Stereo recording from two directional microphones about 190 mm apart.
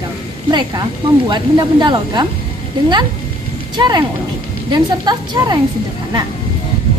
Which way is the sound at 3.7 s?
20° right (ahead or behind).